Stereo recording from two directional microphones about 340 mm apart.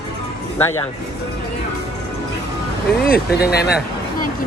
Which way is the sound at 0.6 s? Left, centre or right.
Centre.